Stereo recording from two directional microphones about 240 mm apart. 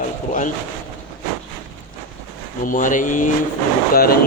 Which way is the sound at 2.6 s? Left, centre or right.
Left.